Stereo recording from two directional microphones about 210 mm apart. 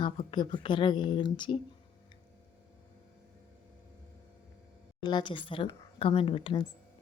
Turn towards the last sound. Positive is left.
turn(degrees=25)  # may be behind; listen again after turning